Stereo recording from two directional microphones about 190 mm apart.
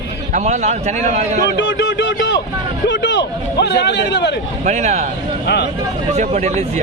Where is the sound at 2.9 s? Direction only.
70° left (ahead or behind).